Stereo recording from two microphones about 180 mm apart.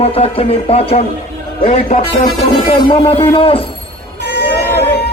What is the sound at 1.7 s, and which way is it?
Speech, 45° left (ahead or behind).